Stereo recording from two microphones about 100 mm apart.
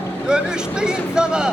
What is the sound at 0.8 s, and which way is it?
Speech, 10° right (ahead or behind).